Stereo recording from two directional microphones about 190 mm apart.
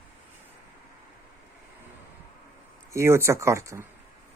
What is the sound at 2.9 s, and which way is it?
Speech, 15° right (ahead or behind).